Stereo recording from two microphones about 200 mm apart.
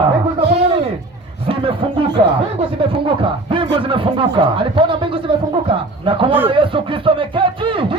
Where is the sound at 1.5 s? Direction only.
25° right (ahead or behind).